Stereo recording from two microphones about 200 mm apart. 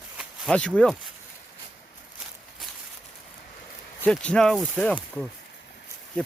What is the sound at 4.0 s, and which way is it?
Speech, 5° left (ahead or behind).